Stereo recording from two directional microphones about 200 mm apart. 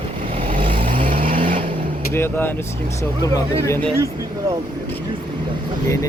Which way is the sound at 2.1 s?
10° left (ahead or behind).